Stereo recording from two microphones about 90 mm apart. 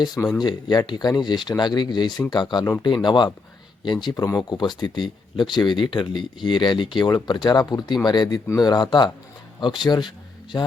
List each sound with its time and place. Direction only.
0.4 s speech: 50° left (ahead or behind)